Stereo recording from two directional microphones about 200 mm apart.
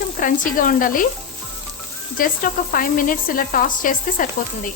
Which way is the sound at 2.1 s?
45° left (ahead or behind).